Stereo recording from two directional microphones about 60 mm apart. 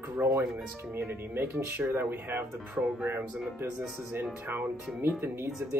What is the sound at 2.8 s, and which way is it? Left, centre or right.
Speech, centre.